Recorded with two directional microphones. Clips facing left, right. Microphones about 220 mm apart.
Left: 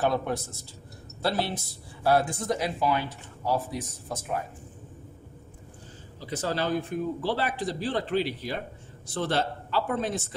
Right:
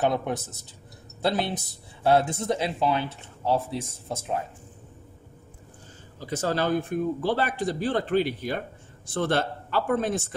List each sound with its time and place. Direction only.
0.0 s speech: 20° right (ahead or behind)
6.1 s a man's voice: 50° right (ahead or behind)